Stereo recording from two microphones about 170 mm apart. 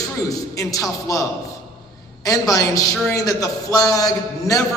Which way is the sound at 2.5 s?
20° left (ahead or behind).